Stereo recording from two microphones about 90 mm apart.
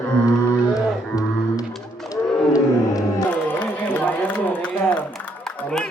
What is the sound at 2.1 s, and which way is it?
Roaring cats, 40° left (ahead or behind).